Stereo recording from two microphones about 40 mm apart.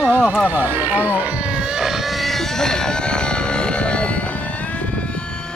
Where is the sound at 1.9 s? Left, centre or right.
Centre; by 5.0 s left.